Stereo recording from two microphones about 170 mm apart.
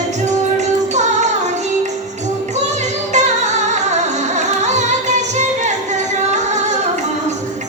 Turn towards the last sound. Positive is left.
turn(degrees=-45)  # may be behind; listen again after turning